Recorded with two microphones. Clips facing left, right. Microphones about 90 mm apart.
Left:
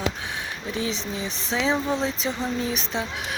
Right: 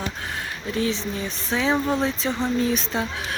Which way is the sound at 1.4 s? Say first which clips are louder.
Right 1 dB; 90° left.